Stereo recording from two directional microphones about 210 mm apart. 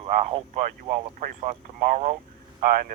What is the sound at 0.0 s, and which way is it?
Speech, 25° right (ahead or behind).